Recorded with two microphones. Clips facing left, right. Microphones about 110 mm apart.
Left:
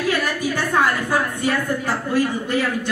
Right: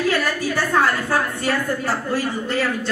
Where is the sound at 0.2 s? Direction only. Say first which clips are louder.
Even; 15° left (ahead or behind).